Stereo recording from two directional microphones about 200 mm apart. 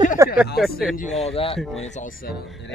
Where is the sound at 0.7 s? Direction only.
45° left (ahead or behind).